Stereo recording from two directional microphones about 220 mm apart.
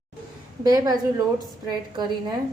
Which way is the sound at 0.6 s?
15° right (ahead or behind).